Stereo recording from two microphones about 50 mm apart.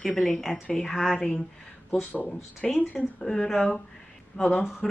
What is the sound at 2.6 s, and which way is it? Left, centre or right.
Speech, centre.